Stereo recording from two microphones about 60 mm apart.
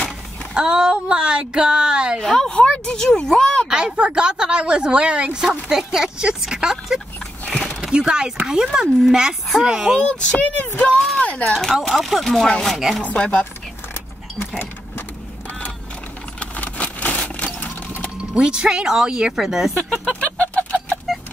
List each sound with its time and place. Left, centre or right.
0.6 s a woman's voice: centre
2.2 s speech: centre
3.6 s a woman's voice: centre
7.4 s a sound: left
7.8 s a woman's voice: centre
9.9 s speech: centre
11.0 s speech: centre
12.7 s speech: centre
13.0 s speech: left
16.3 s vehicle: left
17.6 s sewing machine: left
18.3 s a woman's voice: centre
20.1 s chicken: left
21.1 s a sound: centre